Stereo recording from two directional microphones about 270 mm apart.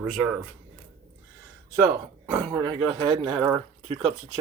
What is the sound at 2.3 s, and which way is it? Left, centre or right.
Speech, centre.